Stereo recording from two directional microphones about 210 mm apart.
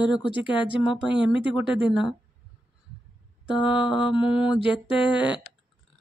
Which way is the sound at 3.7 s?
25° left (ahead or behind).